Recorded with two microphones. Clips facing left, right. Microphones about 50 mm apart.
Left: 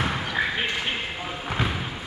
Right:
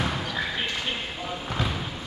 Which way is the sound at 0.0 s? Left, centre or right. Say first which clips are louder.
Left 3 dB; left.